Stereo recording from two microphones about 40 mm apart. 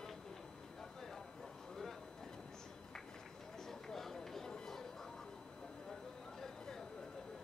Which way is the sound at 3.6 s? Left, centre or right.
Centre.